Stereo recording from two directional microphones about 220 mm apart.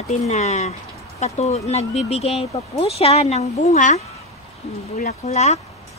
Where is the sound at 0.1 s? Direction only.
30° left (ahead or behind).